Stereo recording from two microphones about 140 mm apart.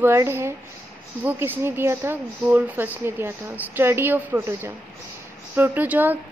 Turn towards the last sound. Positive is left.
turn(degrees=-10)  # may be behind; listen again after turning